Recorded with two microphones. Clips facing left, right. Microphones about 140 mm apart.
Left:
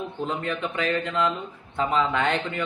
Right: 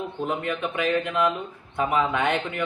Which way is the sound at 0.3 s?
15° right (ahead or behind).